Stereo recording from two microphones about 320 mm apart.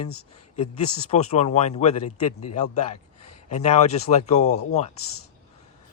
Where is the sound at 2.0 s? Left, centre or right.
Left.